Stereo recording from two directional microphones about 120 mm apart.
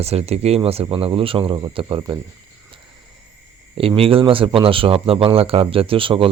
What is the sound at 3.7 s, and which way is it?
Speech, 50° right (ahead or behind).